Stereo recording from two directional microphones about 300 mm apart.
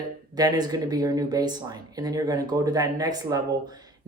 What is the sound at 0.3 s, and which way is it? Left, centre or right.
Speech, centre.